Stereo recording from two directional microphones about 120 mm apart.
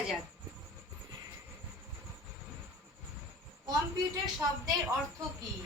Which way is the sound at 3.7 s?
30° right (ahead or behind).